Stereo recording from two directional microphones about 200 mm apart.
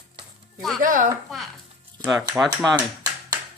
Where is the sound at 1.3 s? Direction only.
Centre (ahead or behind).